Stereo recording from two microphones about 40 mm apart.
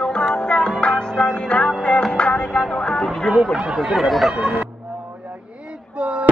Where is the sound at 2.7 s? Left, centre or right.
Centre.